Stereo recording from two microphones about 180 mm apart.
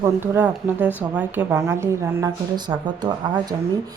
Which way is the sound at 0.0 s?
10° right (ahead or behind).